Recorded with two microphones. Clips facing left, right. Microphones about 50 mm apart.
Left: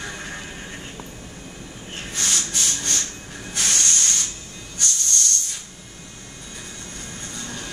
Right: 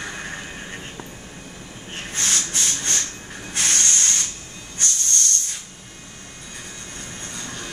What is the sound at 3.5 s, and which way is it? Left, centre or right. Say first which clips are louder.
Hiss: right 1 dB; right.